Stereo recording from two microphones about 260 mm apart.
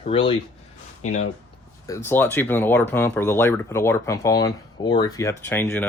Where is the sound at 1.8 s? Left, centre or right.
Centre.